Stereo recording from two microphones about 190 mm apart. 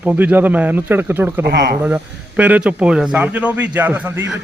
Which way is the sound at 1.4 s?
60° right (ahead or behind).